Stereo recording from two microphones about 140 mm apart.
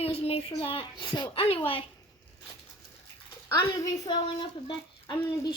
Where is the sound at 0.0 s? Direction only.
45° left (ahead or behind).